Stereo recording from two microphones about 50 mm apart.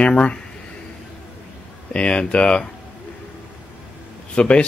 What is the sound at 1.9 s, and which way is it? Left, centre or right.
Speech, left.